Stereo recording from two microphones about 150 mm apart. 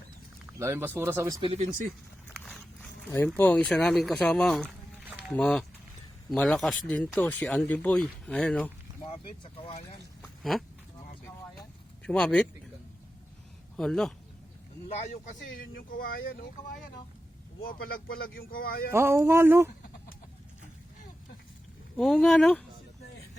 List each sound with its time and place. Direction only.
0.6 s speech: 15° right (ahead or behind)
1.4 s speech: 35° right (ahead or behind)
2.3 s a sound: 5° left (ahead or behind)
3.3 s speech: 10° left (ahead or behind)
9.4 s speech: 35° left (ahead or behind)
12.0 s speech: 5° left (ahead or behind)
13.7 s speech: 5° left (ahead or behind)
14.8 s speech: 45° left (ahead or behind)
15.1 s speech: 60° left (ahead or behind)
17.6 s speech: 85° left
18.9 s speech: 15° right (ahead or behind)
21.9 s speech: 5° left (ahead or behind)